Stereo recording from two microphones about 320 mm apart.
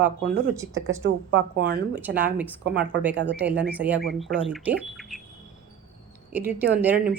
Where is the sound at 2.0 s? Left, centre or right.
Centre.